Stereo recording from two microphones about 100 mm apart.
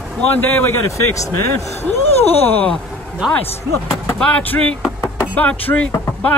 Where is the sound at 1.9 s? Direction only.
90° left.